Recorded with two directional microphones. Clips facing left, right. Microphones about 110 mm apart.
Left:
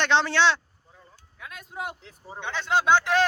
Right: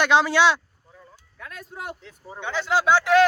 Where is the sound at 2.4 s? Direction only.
10° right (ahead or behind).